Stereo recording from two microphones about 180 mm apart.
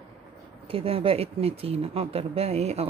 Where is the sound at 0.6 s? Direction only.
30° right (ahead or behind).